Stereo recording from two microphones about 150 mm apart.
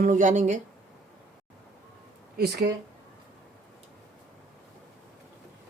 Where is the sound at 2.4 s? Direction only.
90° right.